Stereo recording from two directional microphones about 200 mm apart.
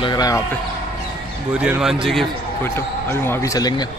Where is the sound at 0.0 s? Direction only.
20° left (ahead or behind).